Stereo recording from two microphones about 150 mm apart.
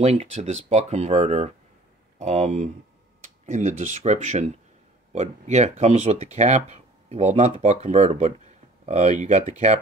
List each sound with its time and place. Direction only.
0.0 s speech: 45° right (ahead or behind)